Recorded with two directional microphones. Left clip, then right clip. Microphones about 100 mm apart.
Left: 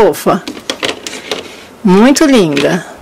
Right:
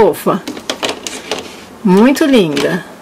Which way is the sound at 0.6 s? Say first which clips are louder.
Left 2 dB; 5° right (ahead or behind).